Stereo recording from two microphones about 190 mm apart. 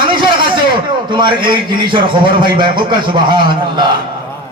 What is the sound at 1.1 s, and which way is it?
A man's voice, 25° right (ahead or behind).